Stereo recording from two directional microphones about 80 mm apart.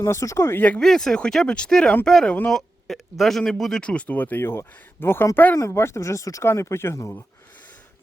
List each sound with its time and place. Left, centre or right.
0.0 s speech: left
0.8 s speech: centre; by 7.1 s left